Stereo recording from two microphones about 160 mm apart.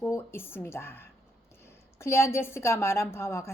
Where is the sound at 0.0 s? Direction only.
15° left (ahead or behind).